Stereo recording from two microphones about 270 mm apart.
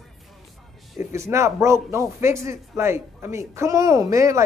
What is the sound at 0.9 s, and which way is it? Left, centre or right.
A man's voice, centre.